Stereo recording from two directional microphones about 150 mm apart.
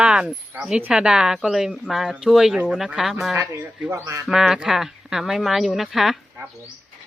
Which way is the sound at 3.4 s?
15° right (ahead or behind).